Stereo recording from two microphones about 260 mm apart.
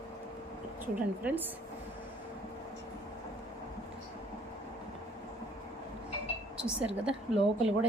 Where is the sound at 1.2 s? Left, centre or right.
Centre.